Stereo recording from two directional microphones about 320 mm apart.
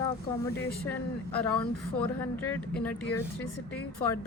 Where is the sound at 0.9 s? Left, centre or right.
Centre.